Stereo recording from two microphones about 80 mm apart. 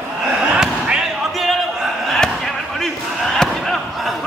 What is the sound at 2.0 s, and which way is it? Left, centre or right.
Chop, centre.